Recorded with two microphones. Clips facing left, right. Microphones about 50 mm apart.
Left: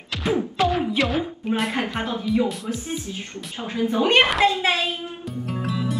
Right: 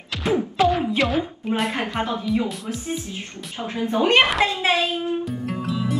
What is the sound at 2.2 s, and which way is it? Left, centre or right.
Speech, centre.